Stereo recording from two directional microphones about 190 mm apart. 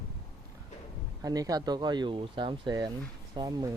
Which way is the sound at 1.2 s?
20° right (ahead or behind).